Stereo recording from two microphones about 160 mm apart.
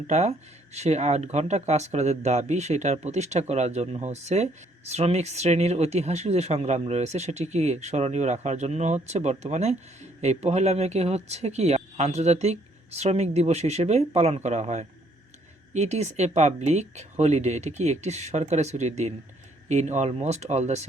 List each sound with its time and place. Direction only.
0.1 s speech: 40° right (ahead or behind)